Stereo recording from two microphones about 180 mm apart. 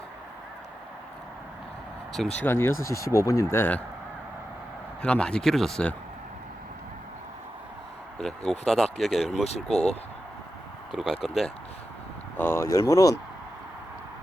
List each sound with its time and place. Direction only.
2.1 s speech: 5° left (ahead or behind)
5.0 s speech: 5° left (ahead or behind)
8.2 s speech: centre (ahead or behind)
9.3 s speech: 35° left (ahead or behind)
9.6 s speech: 5° left (ahead or behind)
10.9 s speech: centre (ahead or behind)
12.4 s speech: 15° left (ahead or behind)